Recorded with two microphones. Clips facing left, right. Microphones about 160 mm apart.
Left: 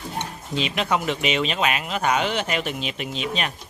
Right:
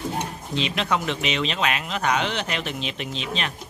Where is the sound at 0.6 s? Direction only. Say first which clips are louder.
Left 1 dB; 5° left (ahead or behind).